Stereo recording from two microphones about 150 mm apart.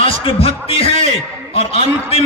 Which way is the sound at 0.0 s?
40° left (ahead or behind).